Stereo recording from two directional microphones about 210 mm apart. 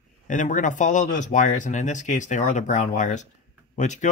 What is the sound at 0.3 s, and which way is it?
Speech, 35° left (ahead or behind).